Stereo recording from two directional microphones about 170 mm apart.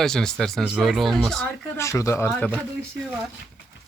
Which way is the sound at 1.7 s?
15° left (ahead or behind).